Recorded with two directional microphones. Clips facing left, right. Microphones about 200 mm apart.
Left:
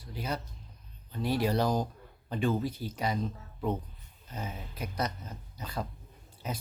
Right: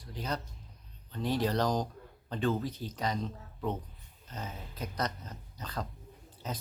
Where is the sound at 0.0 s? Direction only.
10° left (ahead or behind).